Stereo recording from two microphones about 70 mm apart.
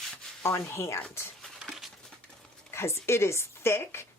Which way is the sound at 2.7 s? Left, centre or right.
Left.